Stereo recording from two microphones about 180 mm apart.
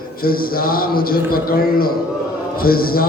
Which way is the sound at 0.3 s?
55° left (ahead or behind).